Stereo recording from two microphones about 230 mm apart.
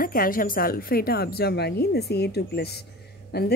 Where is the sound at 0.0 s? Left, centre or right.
Left.